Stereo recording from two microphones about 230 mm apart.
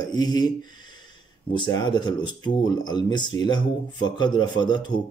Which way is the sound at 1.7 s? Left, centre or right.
Centre.